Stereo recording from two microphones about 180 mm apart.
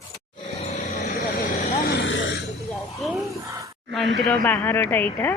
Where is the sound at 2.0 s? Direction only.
90° left.